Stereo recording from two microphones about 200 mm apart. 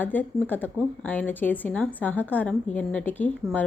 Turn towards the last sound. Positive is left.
turn(degrees=5)  # may be behind; listen again after turning